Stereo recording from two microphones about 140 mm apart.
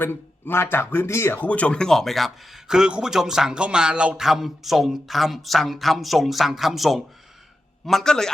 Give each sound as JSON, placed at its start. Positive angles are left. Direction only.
{"t": 0.0, "sound": "speech", "side_deg": 15}